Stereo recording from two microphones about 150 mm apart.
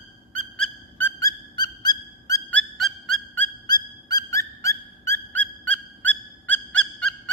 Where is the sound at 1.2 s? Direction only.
25° left (ahead or behind).